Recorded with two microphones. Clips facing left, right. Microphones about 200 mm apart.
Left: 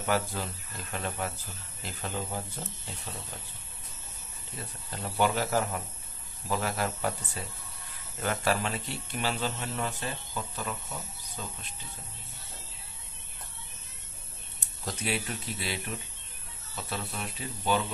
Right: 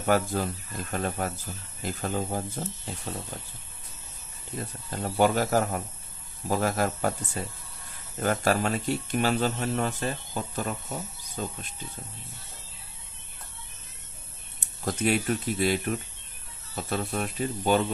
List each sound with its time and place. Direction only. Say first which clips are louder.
0.0 s speech: right 5 dB; 45° right (ahead or behind)
5.0 s speech: right 5 dB; 45° right (ahead or behind)
14.9 s speech: right 8 dB; 50° right (ahead or behind)